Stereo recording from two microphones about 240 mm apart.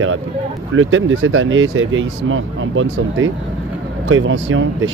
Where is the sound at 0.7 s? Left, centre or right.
Right.